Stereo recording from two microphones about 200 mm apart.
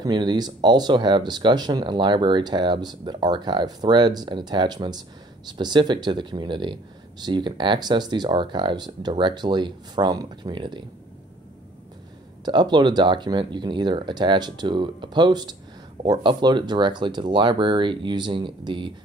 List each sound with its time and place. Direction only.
0.0 s speech: 20° right (ahead or behind)
12.4 s speech: 20° right (ahead or behind)